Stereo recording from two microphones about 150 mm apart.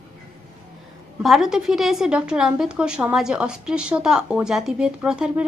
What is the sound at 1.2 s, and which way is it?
A woman's voice, centre (ahead or behind).